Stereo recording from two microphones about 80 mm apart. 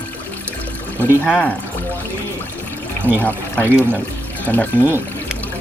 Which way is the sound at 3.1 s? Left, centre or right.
Right.